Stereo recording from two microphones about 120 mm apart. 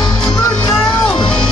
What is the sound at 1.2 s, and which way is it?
Music, 45° left (ahead or behind).